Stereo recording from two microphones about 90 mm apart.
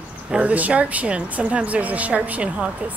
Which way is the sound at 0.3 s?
15° right (ahead or behind).